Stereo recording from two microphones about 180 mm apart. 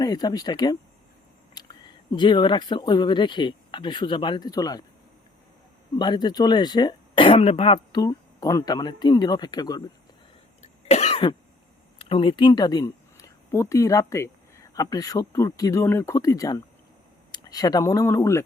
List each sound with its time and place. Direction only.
0.0 s speech: 20° left (ahead or behind)
6.0 s speech: 25° left (ahead or behind)
10.6 s cough: 35° left (ahead or behind)
11.9 s speech: 30° left (ahead or behind)